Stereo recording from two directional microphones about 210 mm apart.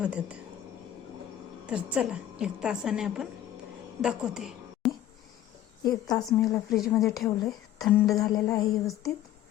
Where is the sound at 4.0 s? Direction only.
5° right (ahead or behind).